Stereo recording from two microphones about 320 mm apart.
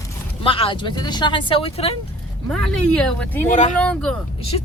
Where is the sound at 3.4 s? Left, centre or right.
Left.